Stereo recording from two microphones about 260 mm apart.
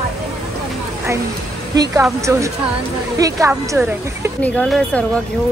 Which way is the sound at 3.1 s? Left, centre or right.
Centre.